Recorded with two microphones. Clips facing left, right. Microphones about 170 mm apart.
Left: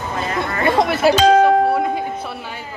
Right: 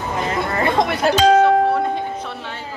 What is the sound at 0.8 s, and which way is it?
Music, 5° left (ahead or behind).